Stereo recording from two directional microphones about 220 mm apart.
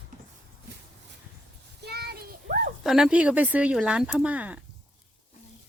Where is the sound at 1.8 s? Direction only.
50° right (ahead or behind).